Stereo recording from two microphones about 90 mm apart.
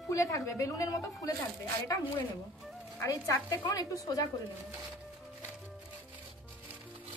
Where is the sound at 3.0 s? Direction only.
35° left (ahead or behind).